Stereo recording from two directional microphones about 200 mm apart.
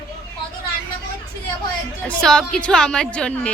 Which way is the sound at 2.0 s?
5° left (ahead or behind).